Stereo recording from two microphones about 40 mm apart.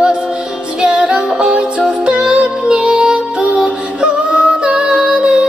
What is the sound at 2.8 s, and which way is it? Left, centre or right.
Music, right.